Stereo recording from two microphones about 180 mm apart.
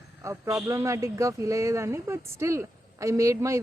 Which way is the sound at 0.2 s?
15° right (ahead or behind).